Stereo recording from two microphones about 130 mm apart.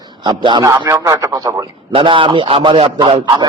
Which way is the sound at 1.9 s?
40° right (ahead or behind).